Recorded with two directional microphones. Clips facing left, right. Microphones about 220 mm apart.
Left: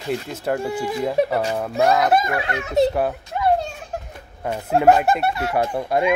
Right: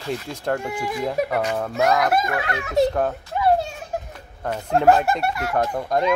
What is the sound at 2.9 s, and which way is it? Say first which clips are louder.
Speech: left 1 dB; 10° left (ahead or behind).